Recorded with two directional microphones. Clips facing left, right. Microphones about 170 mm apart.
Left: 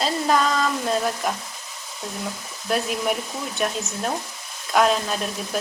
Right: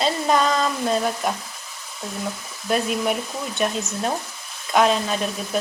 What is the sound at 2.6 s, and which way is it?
Speech, centre (ahead or behind).